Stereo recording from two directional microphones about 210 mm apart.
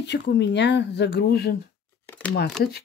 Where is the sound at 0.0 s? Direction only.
55° left (ahead or behind).